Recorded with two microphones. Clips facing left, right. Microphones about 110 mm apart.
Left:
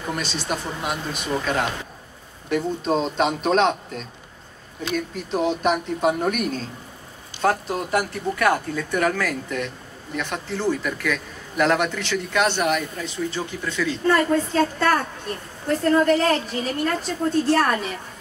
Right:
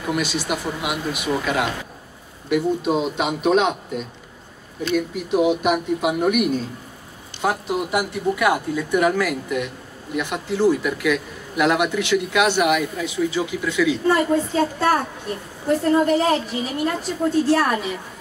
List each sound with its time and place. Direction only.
0.0 s a man's voice: 10° right (ahead or behind)
16.1 s a man's voice: 10° right (ahead or behind)